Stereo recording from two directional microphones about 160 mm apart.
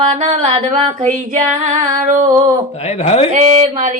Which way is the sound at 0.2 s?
35° right (ahead or behind).